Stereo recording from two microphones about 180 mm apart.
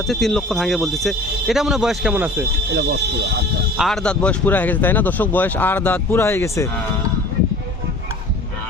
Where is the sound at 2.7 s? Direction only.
65° right (ahead or behind).